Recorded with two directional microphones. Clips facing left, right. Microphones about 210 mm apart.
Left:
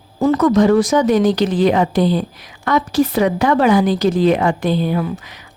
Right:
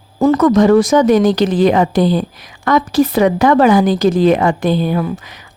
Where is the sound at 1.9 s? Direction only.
90° right.